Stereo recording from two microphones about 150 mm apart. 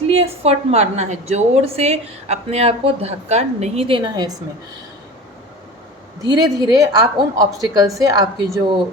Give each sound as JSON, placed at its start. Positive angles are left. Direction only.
{"t": 0.1, "sound": "a woman's voice", "side_deg": -40}
{"t": 6.2, "sound": "a woman's voice", "side_deg": -25}